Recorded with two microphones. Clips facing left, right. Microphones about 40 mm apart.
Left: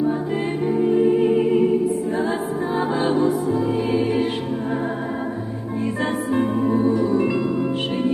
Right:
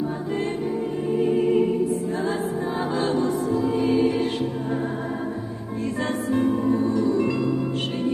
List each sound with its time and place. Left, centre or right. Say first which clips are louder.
0.7 s music: left 8 dB; left
1.5 s opera: left 3 dB; centre
2.9 s music: left 3 dB; centre
6.3 s music: left 1 dB; centre